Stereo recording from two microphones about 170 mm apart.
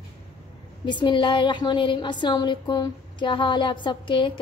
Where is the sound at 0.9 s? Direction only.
30° left (ahead or behind).